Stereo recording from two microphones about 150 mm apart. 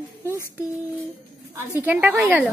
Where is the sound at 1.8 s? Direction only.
10° right (ahead or behind).